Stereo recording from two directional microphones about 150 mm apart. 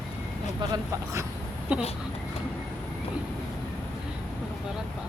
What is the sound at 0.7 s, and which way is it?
Speech, 20° right (ahead or behind).